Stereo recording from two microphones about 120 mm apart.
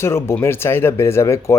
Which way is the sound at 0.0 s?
20° left (ahead or behind).